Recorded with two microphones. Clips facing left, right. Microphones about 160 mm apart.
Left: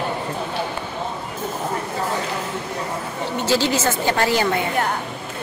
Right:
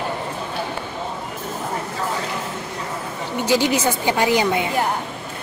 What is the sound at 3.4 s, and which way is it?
A woman's voice, 15° right (ahead or behind).